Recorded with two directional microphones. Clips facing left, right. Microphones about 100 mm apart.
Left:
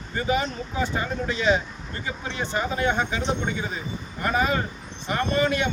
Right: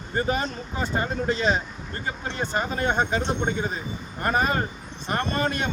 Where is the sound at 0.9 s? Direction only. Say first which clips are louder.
Right 2 dB; 40° right (ahead or behind).